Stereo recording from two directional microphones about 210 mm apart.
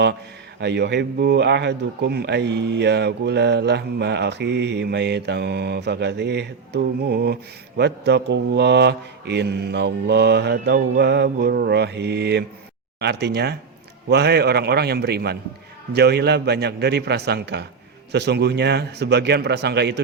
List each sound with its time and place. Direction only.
0.6 s speech: 55° right (ahead or behind)